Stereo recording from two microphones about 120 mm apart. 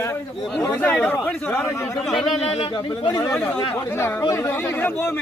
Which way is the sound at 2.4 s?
55° left (ahead or behind).